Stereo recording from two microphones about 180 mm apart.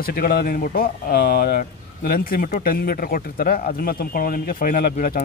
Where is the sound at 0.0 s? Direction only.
55° left (ahead or behind).